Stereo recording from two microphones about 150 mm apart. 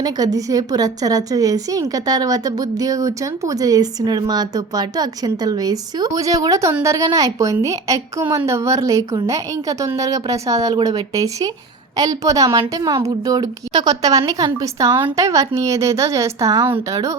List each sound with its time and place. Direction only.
0.0 s a woman's voice: 25° right (ahead or behind)